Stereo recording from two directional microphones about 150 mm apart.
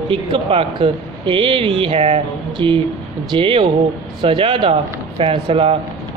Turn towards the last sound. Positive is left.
turn(degrees=-35)  # may be behind; listen again after turning